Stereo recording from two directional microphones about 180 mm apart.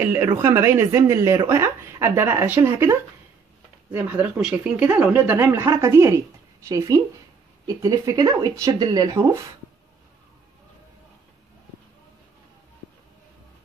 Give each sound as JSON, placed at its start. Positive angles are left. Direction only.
{"t": 0.0, "sound": "speech", "side_deg": -10}